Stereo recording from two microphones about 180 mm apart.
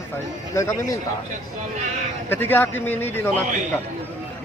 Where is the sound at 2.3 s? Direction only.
10° left (ahead or behind).